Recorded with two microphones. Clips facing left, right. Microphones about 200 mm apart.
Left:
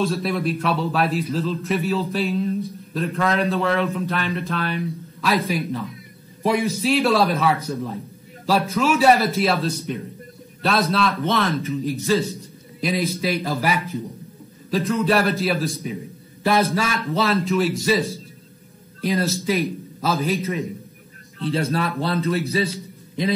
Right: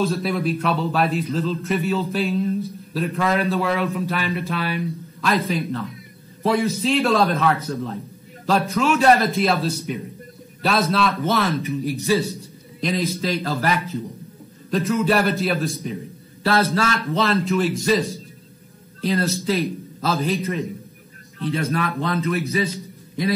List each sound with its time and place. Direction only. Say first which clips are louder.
0.0 s a man's voice: even; centre (ahead or behind)
6.4 s a man's voice: even; 15° left (ahead or behind)
7.7 s a man's voice: even; 10° left (ahead or behind)
11.6 s speech: even; 15° right (ahead or behind)
12.8 s a man's voice: even; 10° left (ahead or behind)
14.7 s a man's voice: even; centre (ahead or behind)
16.4 s a man's voice: even; 15° left (ahead or behind)
17.1 s a man's voice: left 1 dB; centre (ahead or behind)
18.9 s a man's voice: even; 10° left (ahead or behind)
20.2 s a man's voice: even; centre (ahead or behind)
21.5 s speech: left 1 dB; 30° left (ahead or behind)